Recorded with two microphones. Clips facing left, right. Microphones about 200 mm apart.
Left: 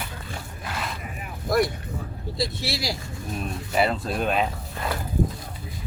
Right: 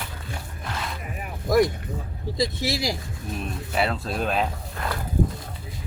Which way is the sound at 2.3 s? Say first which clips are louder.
Right 3 dB; 15° right (ahead or behind).